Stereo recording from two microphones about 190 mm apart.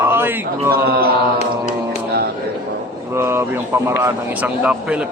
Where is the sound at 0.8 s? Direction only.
55° right (ahead or behind).